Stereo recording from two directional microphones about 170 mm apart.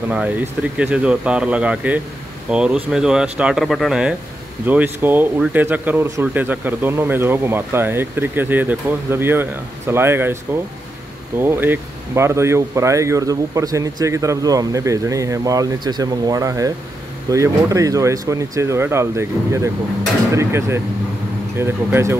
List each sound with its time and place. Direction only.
0.1 s speech: 10° right (ahead or behind)